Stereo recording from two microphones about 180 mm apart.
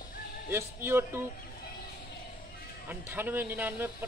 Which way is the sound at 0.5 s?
15° right (ahead or behind).